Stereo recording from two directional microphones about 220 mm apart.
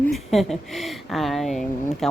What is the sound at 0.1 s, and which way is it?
A woman's voice, centre (ahead or behind).